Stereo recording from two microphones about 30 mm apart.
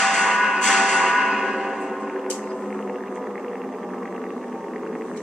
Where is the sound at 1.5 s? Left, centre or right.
Centre.